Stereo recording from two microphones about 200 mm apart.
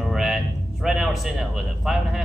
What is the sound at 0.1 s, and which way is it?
Music, centre (ahead or behind).